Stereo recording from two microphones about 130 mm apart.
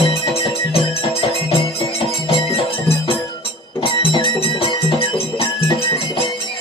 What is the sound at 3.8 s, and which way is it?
Music, 40° left (ahead or behind).